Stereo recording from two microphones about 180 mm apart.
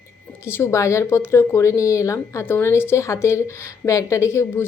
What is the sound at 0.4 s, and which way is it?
A woman's voice, 15° left (ahead or behind).